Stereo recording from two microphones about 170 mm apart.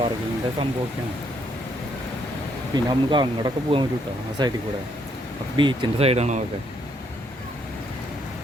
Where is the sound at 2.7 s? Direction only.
25° right (ahead or behind); by 6.4 s 40° right (ahead or behind).